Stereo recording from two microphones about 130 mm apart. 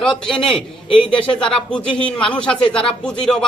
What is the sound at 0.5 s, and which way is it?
Speech, 40° left (ahead or behind).